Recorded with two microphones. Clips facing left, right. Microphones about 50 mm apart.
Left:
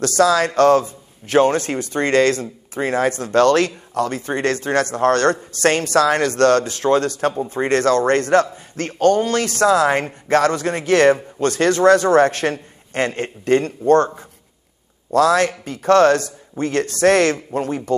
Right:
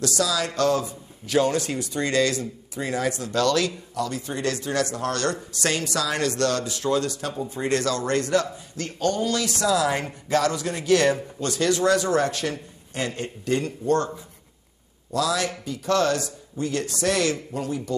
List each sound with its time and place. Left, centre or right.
0.0 s a man's voice: left